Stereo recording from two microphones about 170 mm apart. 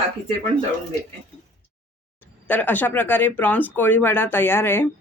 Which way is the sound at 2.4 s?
10° left (ahead or behind).